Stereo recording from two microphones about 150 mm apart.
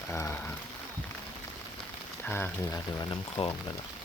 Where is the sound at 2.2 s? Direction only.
15° left (ahead or behind).